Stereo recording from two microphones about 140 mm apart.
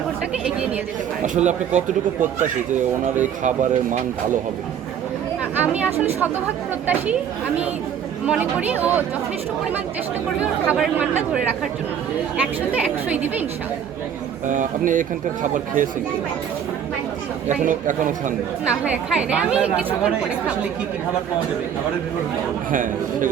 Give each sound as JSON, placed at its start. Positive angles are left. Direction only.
{"t": 1.2, "sound": "speech", "side_deg": -60}
{"t": 5.5, "sound": "a woman's voice", "side_deg": -10}
{"t": 8.3, "sound": "a woman's voice", "side_deg": -10}
{"t": 10.4, "sound": "a woman's voice", "side_deg": -10}
{"t": 12.7, "sound": "a woman's voice", "side_deg": -10}
{"t": 14.4, "sound": "speech", "side_deg": -65}
{"t": 17.5, "sound": "speech", "side_deg": -65}
{"t": 18.6, "sound": "a woman's voice", "side_deg": -5}
{"t": 22.7, "sound": "speech", "side_deg": -70}